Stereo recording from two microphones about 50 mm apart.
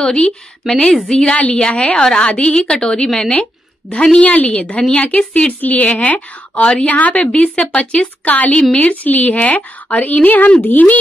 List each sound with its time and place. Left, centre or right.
0.0 s a woman's voice: centre; by 11.0 s left